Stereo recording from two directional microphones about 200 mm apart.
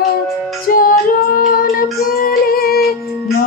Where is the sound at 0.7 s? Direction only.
45° left (ahead or behind).